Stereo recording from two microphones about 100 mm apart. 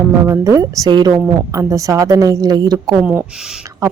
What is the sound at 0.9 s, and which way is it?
Speech, 50° right (ahead or behind).